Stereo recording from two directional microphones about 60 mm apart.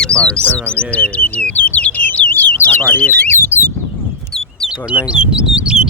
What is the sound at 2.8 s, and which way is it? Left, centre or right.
Speech, left.